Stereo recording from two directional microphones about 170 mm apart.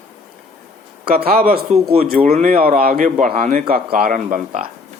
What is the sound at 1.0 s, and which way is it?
Speech, 60° right (ahead or behind).